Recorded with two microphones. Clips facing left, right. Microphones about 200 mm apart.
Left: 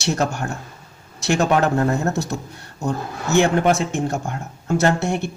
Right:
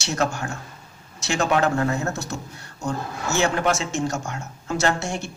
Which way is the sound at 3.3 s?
55° left (ahead or behind).